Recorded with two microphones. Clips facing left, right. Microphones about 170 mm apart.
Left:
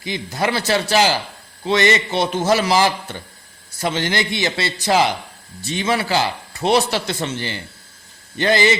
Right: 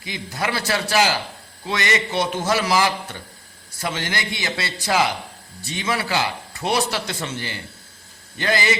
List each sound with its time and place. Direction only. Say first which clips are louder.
0.0 s speech: left 5 dB; 30° left (ahead or behind)